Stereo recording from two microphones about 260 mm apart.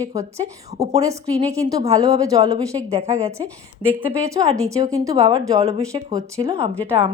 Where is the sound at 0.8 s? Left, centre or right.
Centre.